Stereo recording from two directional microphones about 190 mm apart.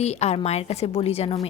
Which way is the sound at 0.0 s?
35° left (ahead or behind).